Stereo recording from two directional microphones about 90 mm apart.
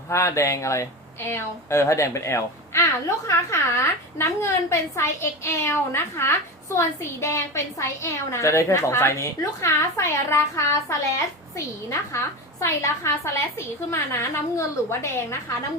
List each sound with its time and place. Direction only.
0.1 s a woman's voice: 35° left (ahead or behind)